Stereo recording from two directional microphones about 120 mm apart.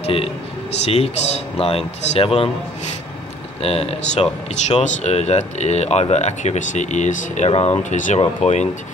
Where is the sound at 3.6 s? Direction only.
55° left (ahead or behind); by 8.2 s 80° left.